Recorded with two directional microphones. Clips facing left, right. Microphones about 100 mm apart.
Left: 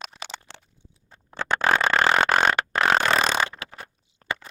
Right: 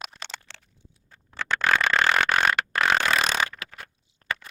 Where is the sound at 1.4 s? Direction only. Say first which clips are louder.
Left 2 dB; 35° left (ahead or behind).